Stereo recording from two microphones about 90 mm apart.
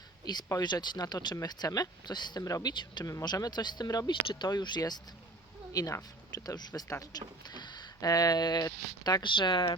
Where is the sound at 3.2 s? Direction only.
50° left (ahead or behind).